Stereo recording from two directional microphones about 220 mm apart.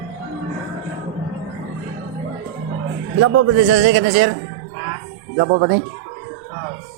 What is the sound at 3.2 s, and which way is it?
Speech, 90° right.